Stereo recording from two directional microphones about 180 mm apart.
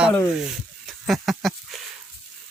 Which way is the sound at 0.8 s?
Centre (ahead or behind).